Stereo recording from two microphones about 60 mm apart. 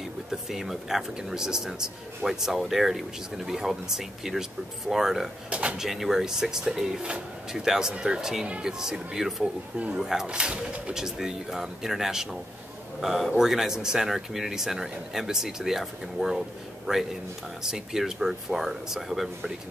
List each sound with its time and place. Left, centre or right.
0.3 s speech: centre
5.5 s speech: right
5.8 s speech: centre